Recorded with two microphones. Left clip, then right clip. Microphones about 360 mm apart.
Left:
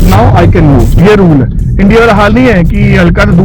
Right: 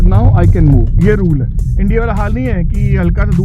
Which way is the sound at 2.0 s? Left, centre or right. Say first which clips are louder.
Left 13 dB; centre.